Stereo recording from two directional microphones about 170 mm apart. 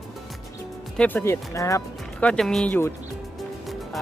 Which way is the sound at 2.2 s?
5° left (ahead or behind).